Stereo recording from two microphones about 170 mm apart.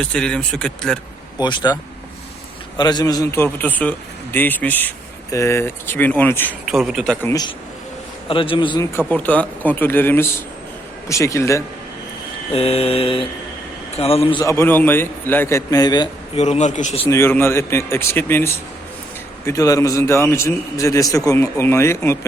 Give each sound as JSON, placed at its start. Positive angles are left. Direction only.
{"t": 0.0, "sound": "speech", "side_deg": 5}
{"t": 1.4, "sound": "a man's voice", "side_deg": 25}
{"t": 6.7, "sound": "speech", "side_deg": 0}
{"t": 8.3, "sound": "a man's voice", "side_deg": 30}
{"t": 9.0, "sound": "a man's voice", "side_deg": 10}
{"t": 12.5, "sound": "a man's voice", "side_deg": 35}
{"t": 14.4, "sound": "a man's voice", "side_deg": 15}
{"t": 16.3, "sound": "a man's voice", "side_deg": 40}
{"t": 17.1, "sound": "a man's voice", "side_deg": 15}